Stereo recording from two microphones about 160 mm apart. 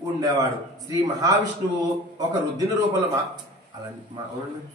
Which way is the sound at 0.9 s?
20° right (ahead or behind).